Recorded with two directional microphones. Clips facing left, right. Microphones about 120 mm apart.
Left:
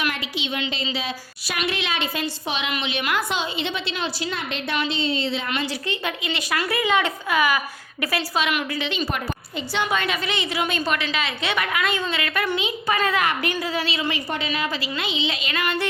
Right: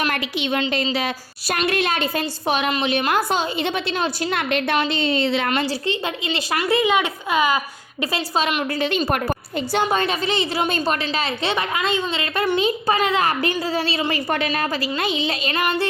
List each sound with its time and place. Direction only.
0.1 s speech: 55° right (ahead or behind)
1.5 s a woman's voice: 45° right (ahead or behind)
4.3 s speech: 60° right (ahead or behind)
5.9 s speech: 30° right (ahead or behind)
8.8 s a woman's voice: 45° right (ahead or behind)
9.7 s a woman's voice: 35° right (ahead or behind)
12.5 s a woman's voice: 40° right (ahead or behind)
13.0 s speech: 20° right (ahead or behind)
13.2 s a woman's voice: 35° right (ahead or behind)
14.1 s a woman's voice: 55° right (ahead or behind)
15.5 s speech: 25° right (ahead or behind)